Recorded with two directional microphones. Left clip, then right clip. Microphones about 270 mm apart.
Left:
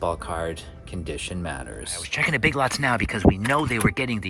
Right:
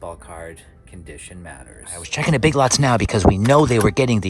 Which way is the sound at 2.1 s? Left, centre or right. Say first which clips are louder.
Right 3 dB; centre.